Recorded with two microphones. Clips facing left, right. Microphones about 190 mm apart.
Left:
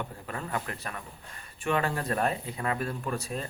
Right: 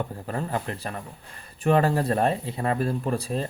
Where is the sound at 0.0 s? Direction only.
35° right (ahead or behind).